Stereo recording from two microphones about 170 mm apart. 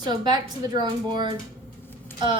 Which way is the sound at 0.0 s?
25° right (ahead or behind).